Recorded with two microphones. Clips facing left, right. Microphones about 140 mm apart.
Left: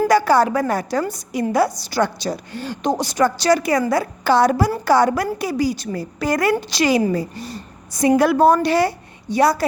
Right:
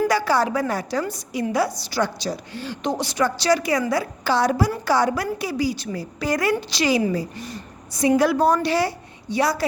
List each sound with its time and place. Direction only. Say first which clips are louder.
0.1 s a woman's voice: left 5 dB; 50° left (ahead or behind)
7.3 s a sound: left 2 dB; 35° left (ahead or behind)
8.0 s a woman's voice: left 4 dB; 55° left (ahead or behind)